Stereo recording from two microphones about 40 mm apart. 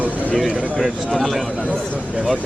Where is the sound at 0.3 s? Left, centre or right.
Centre.